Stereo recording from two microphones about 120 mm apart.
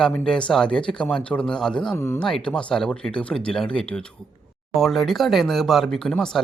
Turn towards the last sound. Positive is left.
turn(degrees=5)  # may be behind; listen again after turning